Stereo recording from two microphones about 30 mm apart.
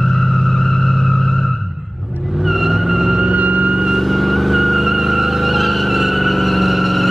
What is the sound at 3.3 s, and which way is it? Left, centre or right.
Vehicle, right.